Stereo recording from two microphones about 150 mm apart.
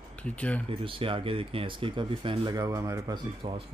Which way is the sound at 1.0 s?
35° right (ahead or behind).